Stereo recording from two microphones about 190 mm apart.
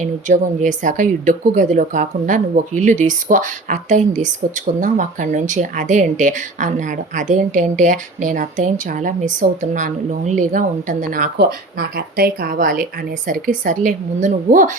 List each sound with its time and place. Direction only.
0.0 s a woman's voice: 40° right (ahead or behind)
11.3 s speech: 55° right (ahead or behind)